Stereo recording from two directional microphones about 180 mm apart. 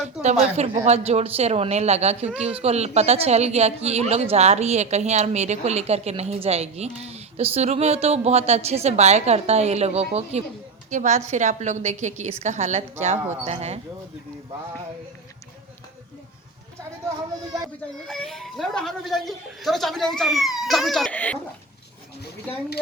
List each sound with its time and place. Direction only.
0.2 s a woman's voice: 40° right (ahead or behind)
18.1 s speech: centre (ahead or behind)